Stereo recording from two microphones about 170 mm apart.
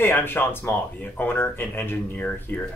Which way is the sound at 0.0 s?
10° left (ahead or behind).